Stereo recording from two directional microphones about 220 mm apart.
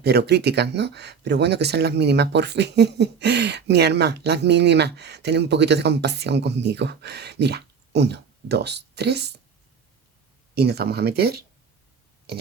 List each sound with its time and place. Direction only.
0.0 s speech: 50° right (ahead or behind)
10.5 s speech: 45° right (ahead or behind)